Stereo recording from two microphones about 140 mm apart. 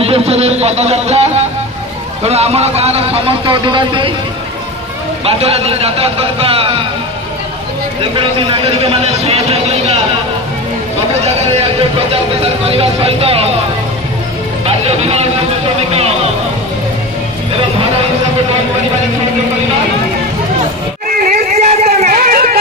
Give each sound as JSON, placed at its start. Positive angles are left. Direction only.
{"t": 0.0, "sound": "speech", "side_deg": -45}
{"t": 5.2, "sound": "speech", "side_deg": -45}
{"t": 8.0, "sound": "a man's voice", "side_deg": -40}
{"t": 12.1, "sound": "speech", "side_deg": -45}
{"t": 14.7, "sound": "speech", "side_deg": -45}
{"t": 21.2, "sound": "a sound", "side_deg": -75}